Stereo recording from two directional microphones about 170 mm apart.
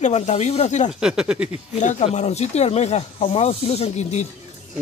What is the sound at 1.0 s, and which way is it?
Speech, 5° right (ahead or behind).